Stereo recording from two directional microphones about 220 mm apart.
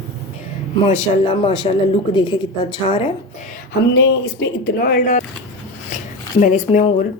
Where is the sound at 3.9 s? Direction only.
50° left (ahead or behind).